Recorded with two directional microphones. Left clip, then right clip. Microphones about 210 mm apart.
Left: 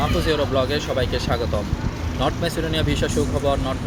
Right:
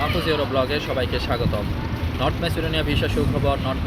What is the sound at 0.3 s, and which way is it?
Speech, 5° left (ahead or behind).